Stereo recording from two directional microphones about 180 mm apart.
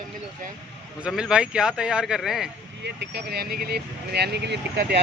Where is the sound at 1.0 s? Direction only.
5° right (ahead or behind).